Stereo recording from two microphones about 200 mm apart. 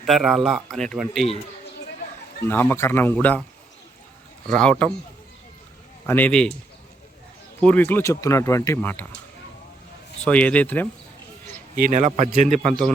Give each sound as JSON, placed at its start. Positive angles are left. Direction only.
{"t": 0.0, "sound": "speech", "side_deg": 0}
{"t": 2.4, "sound": "speech", "side_deg": 10}
{"t": 4.4, "sound": "speech", "side_deg": 5}
{"t": 6.1, "sound": "speech", "side_deg": 10}
{"t": 7.6, "sound": "speech", "side_deg": 5}
{"t": 10.2, "sound": "speech", "side_deg": 5}
{"t": 11.8, "sound": "a man's voice", "side_deg": -40}